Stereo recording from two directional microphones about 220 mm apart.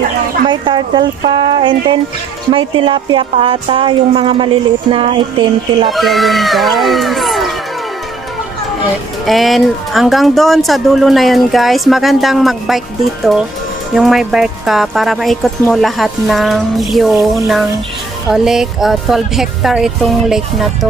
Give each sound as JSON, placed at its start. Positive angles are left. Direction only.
{"t": 0.5, "sound": "speech", "side_deg": -20}
{"t": 5.9, "sound": "speech", "side_deg": 0}
{"t": 9.2, "sound": "speech", "side_deg": 0}
{"t": 18.3, "sound": "speech", "side_deg": 0}